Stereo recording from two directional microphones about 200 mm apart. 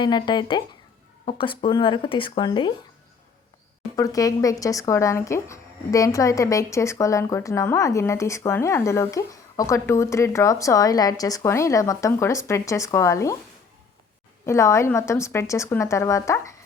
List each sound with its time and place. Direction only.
0.0 s speech: 20° left (ahead or behind)
3.9 s speech: 15° left (ahead or behind)
14.4 s speech: 15° left (ahead or behind)